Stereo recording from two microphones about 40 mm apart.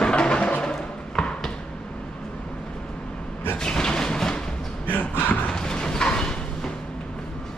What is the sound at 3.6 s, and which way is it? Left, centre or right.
Music, centre.